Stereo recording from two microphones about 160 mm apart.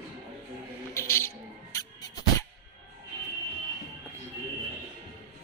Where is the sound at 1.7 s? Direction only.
20° left (ahead or behind).